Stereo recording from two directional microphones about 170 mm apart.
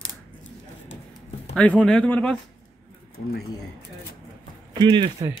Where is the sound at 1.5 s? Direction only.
5° left (ahead or behind).